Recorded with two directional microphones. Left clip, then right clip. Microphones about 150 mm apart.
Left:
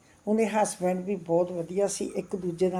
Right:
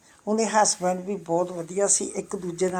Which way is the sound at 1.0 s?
45° right (ahead or behind).